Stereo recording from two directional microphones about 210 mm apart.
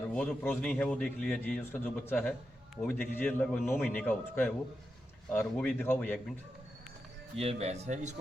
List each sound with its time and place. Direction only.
0.1 s a man's voice: 5° left (ahead or behind)
7.3 s speech: 30° right (ahead or behind)